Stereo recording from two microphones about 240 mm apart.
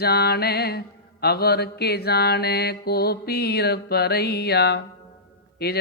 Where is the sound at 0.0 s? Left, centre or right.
Left.